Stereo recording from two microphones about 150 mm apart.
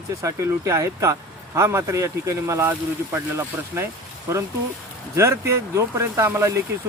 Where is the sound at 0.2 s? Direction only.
20° right (ahead or behind).